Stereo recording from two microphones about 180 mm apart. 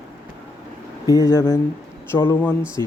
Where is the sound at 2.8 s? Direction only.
20° right (ahead or behind).